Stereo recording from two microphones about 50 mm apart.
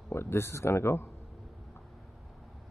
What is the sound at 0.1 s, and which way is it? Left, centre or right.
Speech, left.